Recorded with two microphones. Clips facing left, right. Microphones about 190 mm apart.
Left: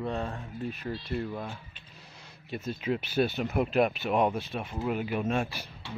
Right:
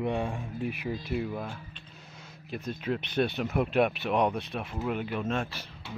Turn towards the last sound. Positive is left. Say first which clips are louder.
# left 2 dB
turn(degrees=10)  # may be behind; listen again after turning